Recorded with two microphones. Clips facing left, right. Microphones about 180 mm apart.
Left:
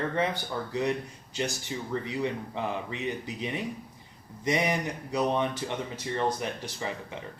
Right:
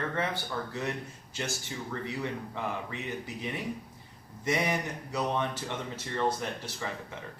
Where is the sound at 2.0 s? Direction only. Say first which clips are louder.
Left 4 dB; 20° left (ahead or behind).